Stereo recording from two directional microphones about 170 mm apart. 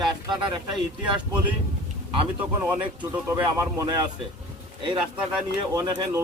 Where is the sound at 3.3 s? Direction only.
20° right (ahead or behind).